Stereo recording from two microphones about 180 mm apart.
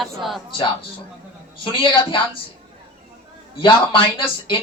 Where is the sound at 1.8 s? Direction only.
30° left (ahead or behind).